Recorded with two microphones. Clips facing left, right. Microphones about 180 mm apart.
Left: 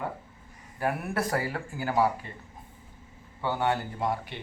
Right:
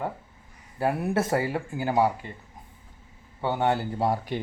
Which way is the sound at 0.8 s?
25° right (ahead or behind).